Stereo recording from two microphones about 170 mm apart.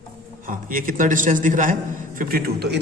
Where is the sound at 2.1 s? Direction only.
60° right (ahead or behind).